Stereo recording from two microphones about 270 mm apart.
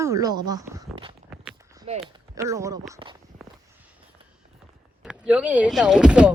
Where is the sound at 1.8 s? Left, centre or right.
Centre.